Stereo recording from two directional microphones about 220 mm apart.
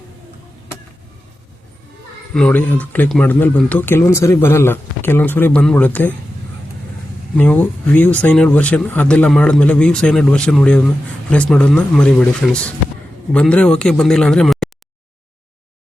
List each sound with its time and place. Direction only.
2.3 s speech: 5° left (ahead or behind)
7.3 s speech: 5° left (ahead or behind)